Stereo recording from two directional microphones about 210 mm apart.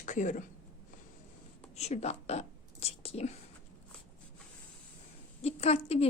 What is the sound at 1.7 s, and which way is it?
Speech, 30° left (ahead or behind).